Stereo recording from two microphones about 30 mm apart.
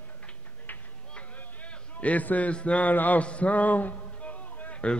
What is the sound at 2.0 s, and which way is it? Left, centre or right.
Speech, left.